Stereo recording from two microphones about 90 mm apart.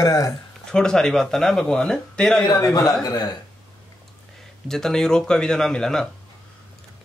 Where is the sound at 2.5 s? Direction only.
40° left (ahead or behind).